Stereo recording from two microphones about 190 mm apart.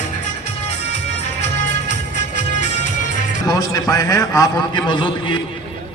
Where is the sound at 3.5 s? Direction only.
20° left (ahead or behind).